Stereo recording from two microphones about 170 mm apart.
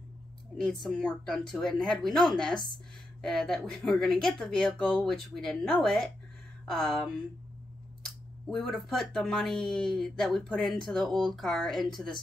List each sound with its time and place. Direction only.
0.8 s speech: 5° left (ahead or behind)